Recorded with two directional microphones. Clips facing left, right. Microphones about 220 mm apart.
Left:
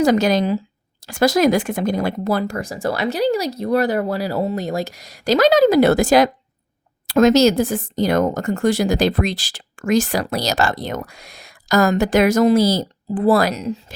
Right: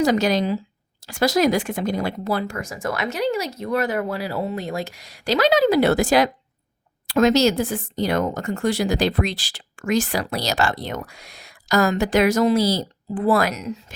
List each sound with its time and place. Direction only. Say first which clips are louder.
0.0 s speech: left 3 dB; 50° left (ahead or behind); by 13.9 s 30° left (ahead or behind)